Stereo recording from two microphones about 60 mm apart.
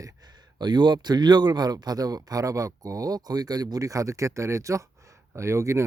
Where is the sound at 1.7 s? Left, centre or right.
Right.